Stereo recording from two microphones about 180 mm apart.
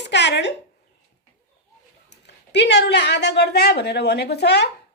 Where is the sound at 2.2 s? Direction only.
70° left (ahead or behind).